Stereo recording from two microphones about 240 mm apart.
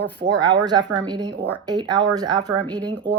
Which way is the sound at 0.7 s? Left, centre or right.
Centre.